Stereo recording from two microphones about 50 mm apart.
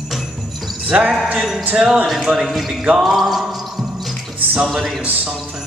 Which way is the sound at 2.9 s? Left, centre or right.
Centre.